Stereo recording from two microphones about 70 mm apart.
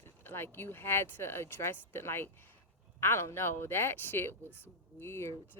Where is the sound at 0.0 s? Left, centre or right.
Left.